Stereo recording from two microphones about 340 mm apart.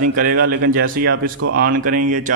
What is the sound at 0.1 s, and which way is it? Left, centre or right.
A man's voice, right.